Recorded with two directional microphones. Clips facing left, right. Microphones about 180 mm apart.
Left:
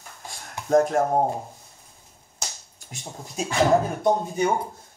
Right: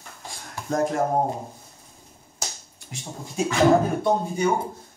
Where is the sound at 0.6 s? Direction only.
20° left (ahead or behind).